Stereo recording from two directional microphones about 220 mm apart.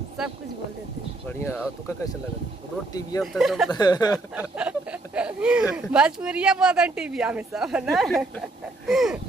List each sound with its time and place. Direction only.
1.4 s speech: 10° left (ahead or behind)
3.2 s speech: centre (ahead or behind)
3.7 s speech: 15° left (ahead or behind)
4.6 s speech: 5° right (ahead or behind)